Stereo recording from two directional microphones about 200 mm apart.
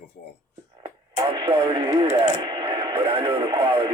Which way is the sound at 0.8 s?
25° right (ahead or behind).